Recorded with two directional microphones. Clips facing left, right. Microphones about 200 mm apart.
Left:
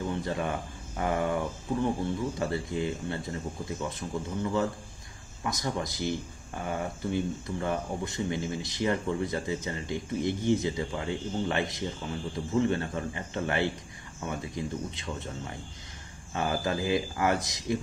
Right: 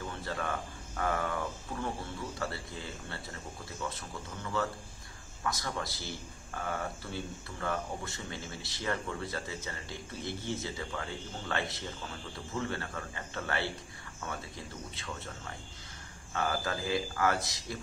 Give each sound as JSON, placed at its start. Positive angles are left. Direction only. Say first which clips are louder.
{"t": 0.1, "sound": "speech", "louder": "left 6 dB", "side_deg": 20}
{"t": 2.3, "sound": "speech", "louder": "left 8 dB", "side_deg": 20}
{"t": 16.3, "sound": "speech", "louder": "left 4 dB", "side_deg": 20}